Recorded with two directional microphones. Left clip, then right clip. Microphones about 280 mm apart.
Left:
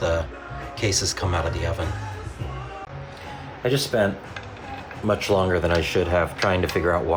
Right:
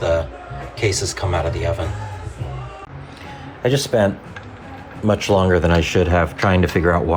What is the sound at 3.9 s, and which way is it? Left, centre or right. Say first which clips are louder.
Speech: right 5 dB; right.